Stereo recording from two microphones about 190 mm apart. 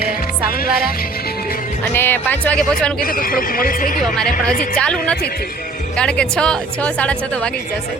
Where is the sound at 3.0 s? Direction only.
45° left (ahead or behind).